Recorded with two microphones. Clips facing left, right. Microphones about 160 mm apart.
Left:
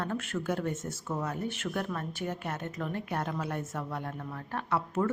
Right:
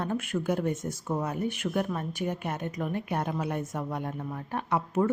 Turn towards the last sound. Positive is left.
turn(degrees=-15)  # may be behind; listen again after turning